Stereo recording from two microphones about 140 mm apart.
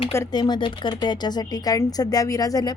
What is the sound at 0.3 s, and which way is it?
Speech, 30° left (ahead or behind).